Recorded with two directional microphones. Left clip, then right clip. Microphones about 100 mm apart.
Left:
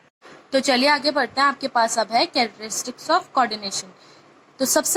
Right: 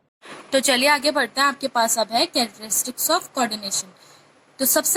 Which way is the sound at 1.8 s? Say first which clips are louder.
Left 1 dB; 35° right (ahead or behind).